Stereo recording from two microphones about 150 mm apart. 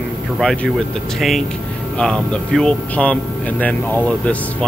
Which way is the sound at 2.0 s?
5° left (ahead or behind).